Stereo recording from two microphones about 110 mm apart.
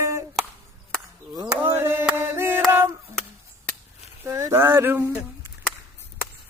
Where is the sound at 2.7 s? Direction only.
20° right (ahead or behind).